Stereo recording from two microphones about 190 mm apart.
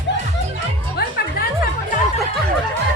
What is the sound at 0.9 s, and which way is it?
Music, 55° left (ahead or behind).